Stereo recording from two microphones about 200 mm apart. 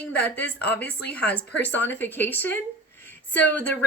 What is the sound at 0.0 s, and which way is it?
A woman's voice, 5° left (ahead or behind).